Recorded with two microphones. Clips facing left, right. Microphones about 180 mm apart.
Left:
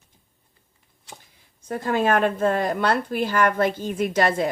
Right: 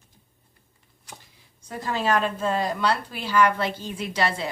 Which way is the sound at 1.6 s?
55° left (ahead or behind).